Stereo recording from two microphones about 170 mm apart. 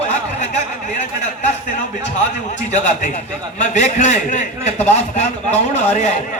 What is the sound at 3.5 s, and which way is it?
Speech, 45° left (ahead or behind).